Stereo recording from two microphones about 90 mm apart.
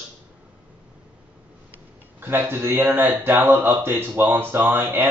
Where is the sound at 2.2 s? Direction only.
25° right (ahead or behind).